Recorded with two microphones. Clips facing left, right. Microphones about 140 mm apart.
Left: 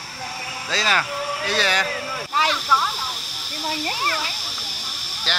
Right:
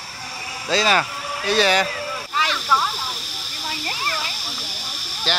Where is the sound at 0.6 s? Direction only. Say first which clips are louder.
Right 4 dB; 20° right (ahead or behind).